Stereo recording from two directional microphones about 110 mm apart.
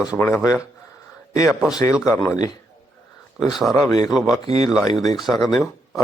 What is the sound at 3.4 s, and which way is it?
Speech, 5° right (ahead or behind).